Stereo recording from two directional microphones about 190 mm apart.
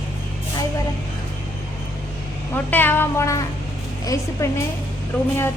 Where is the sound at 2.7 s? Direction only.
10° left (ahead or behind).